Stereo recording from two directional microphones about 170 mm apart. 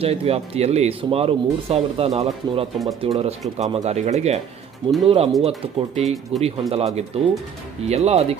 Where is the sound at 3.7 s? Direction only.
40° right (ahead or behind).